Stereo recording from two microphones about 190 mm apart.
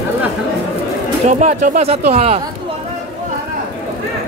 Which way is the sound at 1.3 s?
40° right (ahead or behind).